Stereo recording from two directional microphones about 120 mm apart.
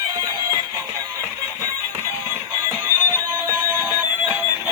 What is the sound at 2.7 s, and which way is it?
Music, 30° right (ahead or behind).